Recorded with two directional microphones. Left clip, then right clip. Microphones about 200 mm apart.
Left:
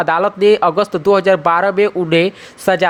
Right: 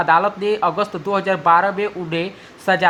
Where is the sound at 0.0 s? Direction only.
35° left (ahead or behind).